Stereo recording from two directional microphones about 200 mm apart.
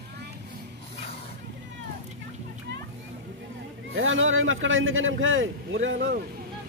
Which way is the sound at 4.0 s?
75° right (ahead or behind).